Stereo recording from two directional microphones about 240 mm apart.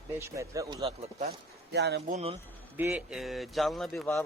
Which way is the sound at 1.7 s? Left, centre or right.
Right.